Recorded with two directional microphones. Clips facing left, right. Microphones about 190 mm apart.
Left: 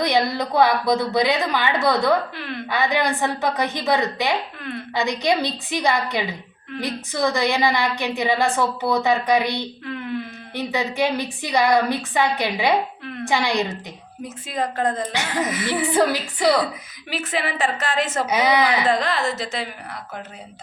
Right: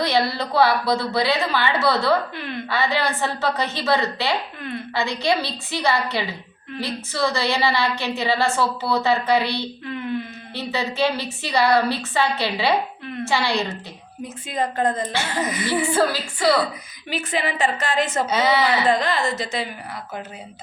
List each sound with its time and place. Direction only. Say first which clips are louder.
0.0 s a woman's voice: left 1 dB; 15° left (ahead or behind)
2.3 s a woman's voice: even; centre (ahead or behind)
2.6 s a woman's voice: left 2 dB; 15° left (ahead or behind)
14.4 s a woman's voice: right 1 dB; centre (ahead or behind)
15.1 s a woman's voice: left 1 dB; 15° left (ahead or behind)
17.1 s a woman's voice: right 1 dB; centre (ahead or behind)
18.3 s a woman's voice: left 2 dB; 15° left (ahead or behind)
18.9 s a woman's voice: right 1 dB; centre (ahead or behind)